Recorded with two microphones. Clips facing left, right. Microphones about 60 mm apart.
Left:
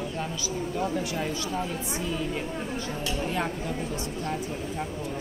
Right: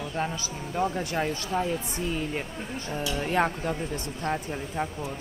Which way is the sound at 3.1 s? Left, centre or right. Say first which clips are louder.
Right 5 dB; right.